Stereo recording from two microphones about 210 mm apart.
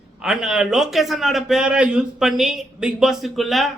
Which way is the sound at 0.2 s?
5° right (ahead or behind).